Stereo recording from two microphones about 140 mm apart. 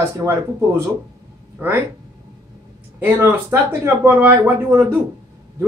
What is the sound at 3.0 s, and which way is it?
Speech, 15° right (ahead or behind).